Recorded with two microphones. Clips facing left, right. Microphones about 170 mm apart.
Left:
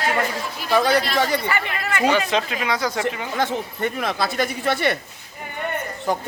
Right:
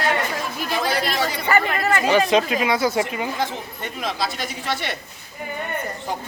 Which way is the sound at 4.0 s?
60° left (ahead or behind).